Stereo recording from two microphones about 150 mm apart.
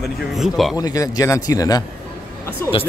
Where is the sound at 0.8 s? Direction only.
25° left (ahead or behind).